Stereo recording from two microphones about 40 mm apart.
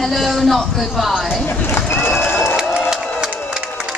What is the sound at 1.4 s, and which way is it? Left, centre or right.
Speech, left.